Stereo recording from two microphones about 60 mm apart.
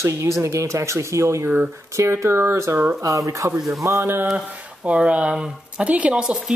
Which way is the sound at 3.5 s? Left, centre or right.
Centre.